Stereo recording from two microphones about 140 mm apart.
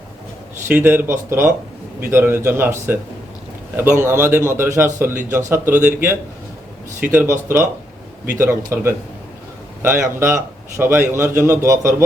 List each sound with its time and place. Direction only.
0.7 s a man's voice: 15° right (ahead or behind)
4.0 s a man's voice: 15° right (ahead or behind)